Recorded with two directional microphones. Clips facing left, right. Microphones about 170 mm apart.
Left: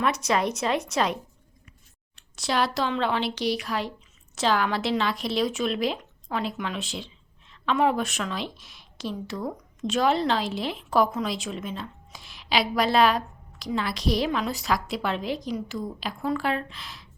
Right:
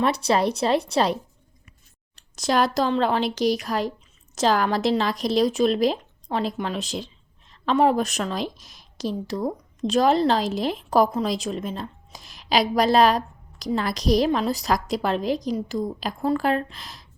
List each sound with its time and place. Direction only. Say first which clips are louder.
0.0 s a woman's voice: right 4 dB; 30° right (ahead or behind)